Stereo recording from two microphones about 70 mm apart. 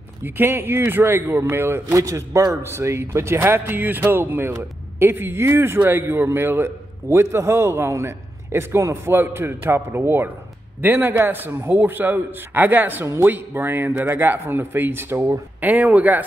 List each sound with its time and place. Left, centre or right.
0.2 s a man's voice: right
2.0 s a man's voice: right
2.6 s a man's voice: right
13.0 s a man's voice: right
13.3 s a man's voice: right
15.6 s a man's voice: right